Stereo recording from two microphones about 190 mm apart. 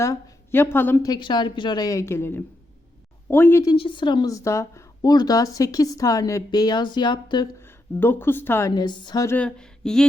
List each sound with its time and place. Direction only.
0.0 s a woman's voice: 15° left (ahead or behind)
7.6 s a woman's voice: 10° left (ahead or behind)